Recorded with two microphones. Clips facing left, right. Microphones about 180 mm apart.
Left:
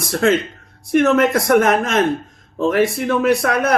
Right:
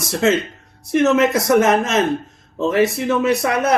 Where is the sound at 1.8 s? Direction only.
25° right (ahead or behind).